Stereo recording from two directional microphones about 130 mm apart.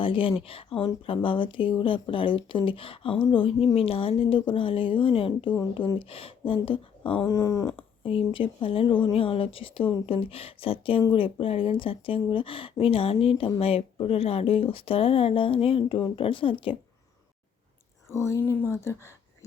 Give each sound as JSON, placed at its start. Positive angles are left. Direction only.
{"t": 0.0, "sound": "speech", "side_deg": 40}
{"t": 7.3, "sound": "speech", "side_deg": 25}
{"t": 7.8, "sound": "speech", "side_deg": 45}
{"t": 18.1, "sound": "speech", "side_deg": 20}